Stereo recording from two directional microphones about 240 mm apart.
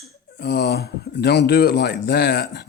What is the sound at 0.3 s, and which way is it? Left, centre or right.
Speech, left.